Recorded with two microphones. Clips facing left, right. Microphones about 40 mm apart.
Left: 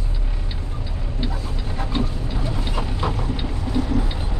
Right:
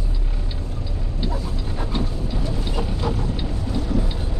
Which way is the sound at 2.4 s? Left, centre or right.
Left.